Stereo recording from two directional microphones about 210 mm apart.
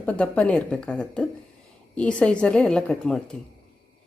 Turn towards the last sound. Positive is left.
turn(degrees=5)  # may be behind; listen again after turning